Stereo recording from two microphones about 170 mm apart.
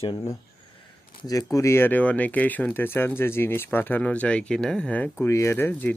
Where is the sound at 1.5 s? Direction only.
15° left (ahead or behind).